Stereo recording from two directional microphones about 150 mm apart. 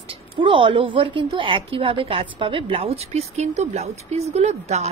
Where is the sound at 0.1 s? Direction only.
35° right (ahead or behind).